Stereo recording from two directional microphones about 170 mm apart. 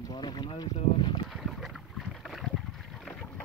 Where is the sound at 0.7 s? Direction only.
30° left (ahead or behind).